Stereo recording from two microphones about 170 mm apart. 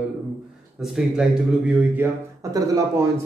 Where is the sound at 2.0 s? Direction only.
15° right (ahead or behind).